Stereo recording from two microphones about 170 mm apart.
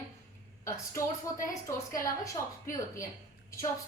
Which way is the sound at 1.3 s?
20° left (ahead or behind).